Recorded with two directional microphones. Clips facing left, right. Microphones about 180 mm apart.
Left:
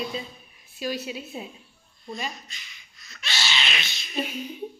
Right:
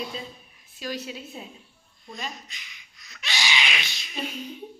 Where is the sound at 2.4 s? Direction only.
15° right (ahead or behind).